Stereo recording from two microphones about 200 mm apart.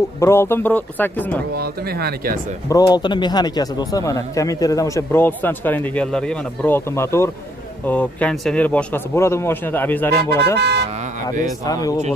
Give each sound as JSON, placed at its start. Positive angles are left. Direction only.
{"t": 0.2, "sound": "speech", "side_deg": 10}
{"t": 1.5, "sound": "speech", "side_deg": -50}
{"t": 2.7, "sound": "speech", "side_deg": 20}
{"t": 10.6, "sound": "speech", "side_deg": -55}
{"t": 11.4, "sound": "speech", "side_deg": 15}